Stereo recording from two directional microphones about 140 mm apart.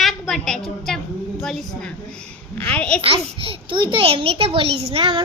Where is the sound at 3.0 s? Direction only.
40° right (ahead or behind).